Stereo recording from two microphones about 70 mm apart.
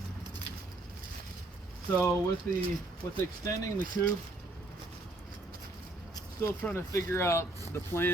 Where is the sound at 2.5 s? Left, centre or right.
Left.